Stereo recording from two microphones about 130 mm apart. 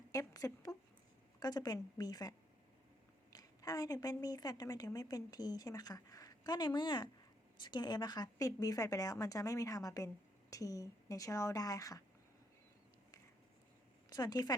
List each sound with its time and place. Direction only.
0.1 s a sound: 25° left (ahead or behind)
1.4 s a woman's voice: 30° left (ahead or behind)
3.3 s a woman's voice: 25° left (ahead or behind)
14.1 s a woman's voice: 30° left (ahead or behind)